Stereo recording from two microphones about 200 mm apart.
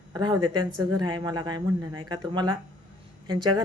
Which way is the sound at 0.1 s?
20° right (ahead or behind).